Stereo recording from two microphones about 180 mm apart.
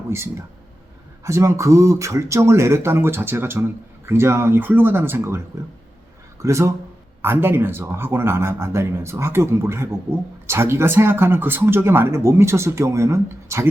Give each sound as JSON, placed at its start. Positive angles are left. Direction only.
{"t": 0.1, "sound": "speech", "side_deg": -15}
{"t": 6.4, "sound": "speech", "side_deg": -15}